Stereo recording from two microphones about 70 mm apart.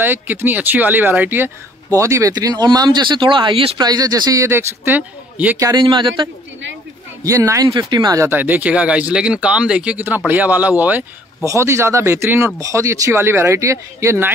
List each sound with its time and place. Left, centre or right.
0.0 s speech: right
1.9 s speech: right
2.3 s speech: right
3.7 s speech: right
4.4 s speech: right
5.7 s speech: right
7.2 s speech: right
7.6 s speech: right
8.3 s speech: right
10.0 s speech: right
11.4 s speech: right
13.1 s speech: right